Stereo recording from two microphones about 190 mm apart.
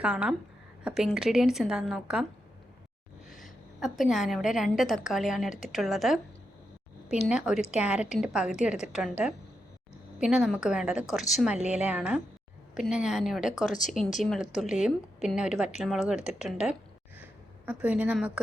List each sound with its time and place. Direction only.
0.0 s a woman's voice: 5° right (ahead or behind)
3.2 s a woman's voice: centre (ahead or behind)
13.7 s speech: 40° left (ahead or behind)
14.2 s a woman's voice: centre (ahead or behind)